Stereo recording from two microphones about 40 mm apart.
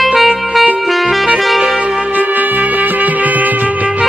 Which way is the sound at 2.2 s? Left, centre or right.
Right.